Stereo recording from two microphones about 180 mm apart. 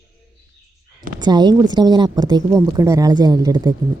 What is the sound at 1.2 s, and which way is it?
A woman's voice, 25° right (ahead or behind).